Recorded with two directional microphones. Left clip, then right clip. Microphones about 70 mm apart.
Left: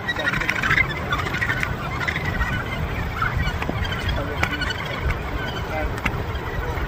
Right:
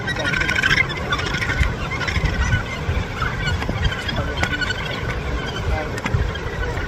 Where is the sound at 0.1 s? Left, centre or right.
Centre.